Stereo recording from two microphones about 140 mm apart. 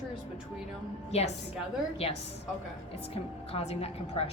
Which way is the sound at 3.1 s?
45° left (ahead or behind).